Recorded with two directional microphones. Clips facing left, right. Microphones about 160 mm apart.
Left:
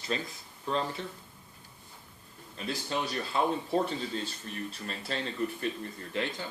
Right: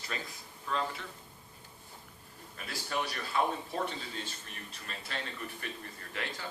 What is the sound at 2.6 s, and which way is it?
A man's voice, 25° left (ahead or behind).